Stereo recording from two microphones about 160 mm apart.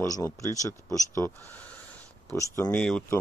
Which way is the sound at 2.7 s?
5° left (ahead or behind).